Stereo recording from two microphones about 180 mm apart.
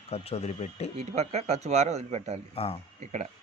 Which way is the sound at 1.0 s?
35° right (ahead or behind).